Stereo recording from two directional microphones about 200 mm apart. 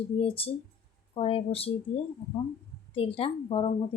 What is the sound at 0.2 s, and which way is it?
Speech, 30° left (ahead or behind).